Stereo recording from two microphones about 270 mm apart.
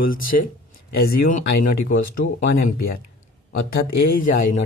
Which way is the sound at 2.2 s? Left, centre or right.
Left.